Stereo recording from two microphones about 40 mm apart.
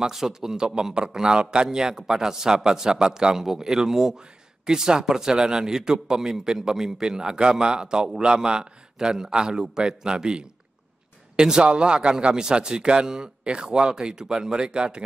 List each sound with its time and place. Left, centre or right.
0.0 s a man's voice: centre